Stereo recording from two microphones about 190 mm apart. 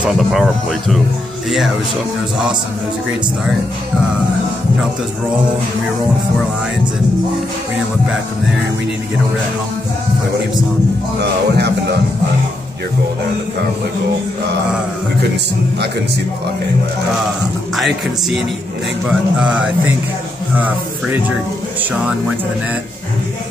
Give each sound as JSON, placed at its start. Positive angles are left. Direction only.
{"t": 0.0, "sound": "speech", "side_deg": 0}
{"t": 11.1, "sound": "speech", "side_deg": -60}
{"t": 17.7, "sound": "speech", "side_deg": 0}